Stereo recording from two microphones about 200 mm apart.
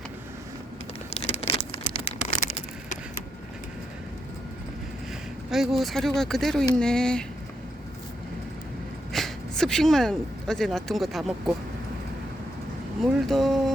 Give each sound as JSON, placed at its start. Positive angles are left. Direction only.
{"t": 1.1, "sound": "a sound", "side_deg": 30}
{"t": 5.5, "sound": "speech", "side_deg": 0}
{"t": 9.1, "sound": "speech", "side_deg": 0}
{"t": 13.0, "sound": "speech", "side_deg": 0}